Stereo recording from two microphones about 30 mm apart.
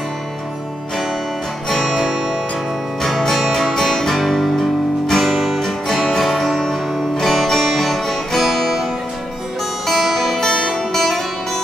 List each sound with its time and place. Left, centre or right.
2.0 s music: centre
3.3 s music: centre
4.6 s music: centre
9.8 s music: centre